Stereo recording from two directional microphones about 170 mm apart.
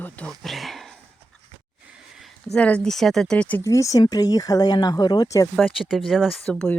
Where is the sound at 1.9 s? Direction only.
Centre (ahead or behind).